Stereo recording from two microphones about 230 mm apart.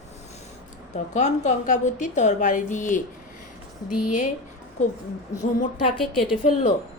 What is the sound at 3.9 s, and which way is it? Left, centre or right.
Speech, left.